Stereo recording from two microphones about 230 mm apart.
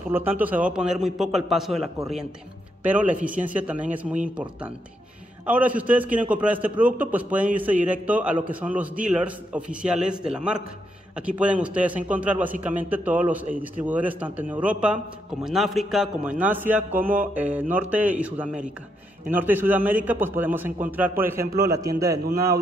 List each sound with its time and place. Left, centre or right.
0.1 s a man's voice: centre